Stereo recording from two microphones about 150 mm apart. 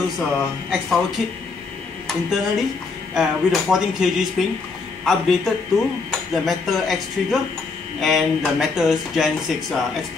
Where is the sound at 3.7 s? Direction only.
Centre (ahead or behind).